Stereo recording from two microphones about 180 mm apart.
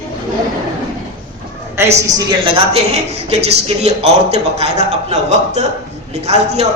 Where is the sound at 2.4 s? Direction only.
30° right (ahead or behind).